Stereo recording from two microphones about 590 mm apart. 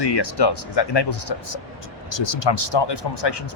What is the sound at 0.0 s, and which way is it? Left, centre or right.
Speech, left.